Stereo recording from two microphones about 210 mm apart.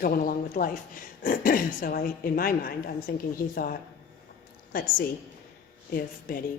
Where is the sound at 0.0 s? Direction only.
40° left (ahead or behind).